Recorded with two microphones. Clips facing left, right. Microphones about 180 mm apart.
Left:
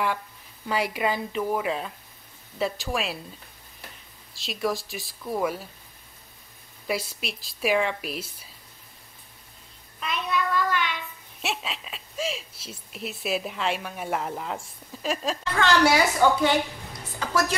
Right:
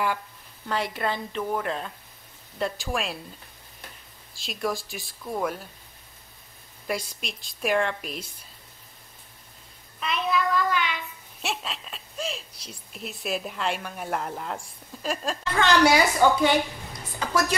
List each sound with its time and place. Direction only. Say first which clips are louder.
0.7 s a woman's voice: left 2 dB; 10° left (ahead or behind)
4.4 s speech: left 1 dB; centre (ahead or behind)
6.9 s speech: left 1 dB; 5° left (ahead or behind)
9.9 s child singing: right 2 dB; centre (ahead or behind)
11.4 s speech: left 1 dB; centre (ahead or behind)
15.5 s a woman's voice: right 1 dB; 15° right (ahead or behind)
17.2 s a sound: right 1 dB; 15° right (ahead or behind)